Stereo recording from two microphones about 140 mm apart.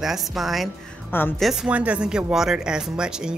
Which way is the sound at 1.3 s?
Centre (ahead or behind).